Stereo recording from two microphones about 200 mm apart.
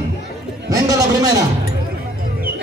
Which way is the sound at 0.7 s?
15° right (ahead or behind).